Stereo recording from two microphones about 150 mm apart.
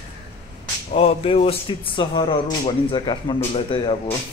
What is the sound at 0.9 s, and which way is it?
Speech, 40° left (ahead or behind).